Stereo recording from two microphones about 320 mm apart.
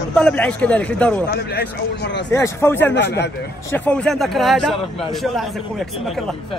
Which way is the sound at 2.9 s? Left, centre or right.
Left.